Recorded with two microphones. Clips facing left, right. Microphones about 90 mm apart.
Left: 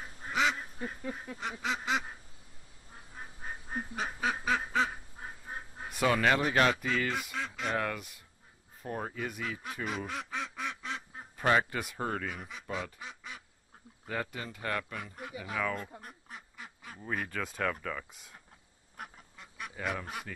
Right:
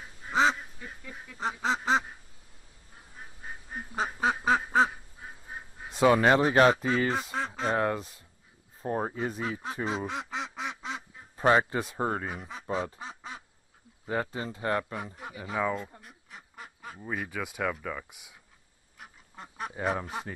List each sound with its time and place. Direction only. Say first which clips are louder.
0.3 s duck: right 5 dB; 30° right (ahead or behind)
0.7 s goose: left 6 dB; 40° left (ahead or behind)
1.4 s speech: right 7 dB; 30° right (ahead or behind)
3.9 s duck: right 6 dB; 35° right (ahead or behind)
5.9 s speech: right 6 dB; 25° right (ahead or behind)
16.0 s duck: left 3 dB; 45° left (ahead or behind)
16.3 s duck: right 2 dB; 45° right (ahead or behind)
17.0 s speech: right 1 dB; 5° right (ahead or behind)
19.0 s duck: left 5 dB; 50° left (ahead or behind)
19.3 s goose: right 8 dB; 40° right (ahead or behind)